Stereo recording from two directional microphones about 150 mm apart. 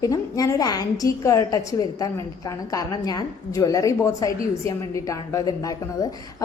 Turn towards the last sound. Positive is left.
turn(degrees=25)  # may be behind; listen again after turning